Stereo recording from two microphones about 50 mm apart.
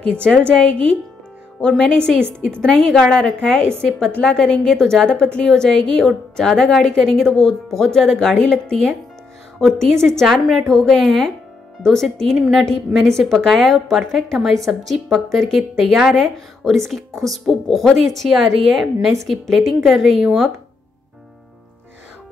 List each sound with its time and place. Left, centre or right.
0.0 s a woman's voice: left
1.6 s a woman's voice: centre
2.9 s a woman's voice: centre
8.4 s a woman's voice: left
9.6 s a woman's voice: centre
12.4 s a woman's voice: centre
12.6 s a woman's voice: centre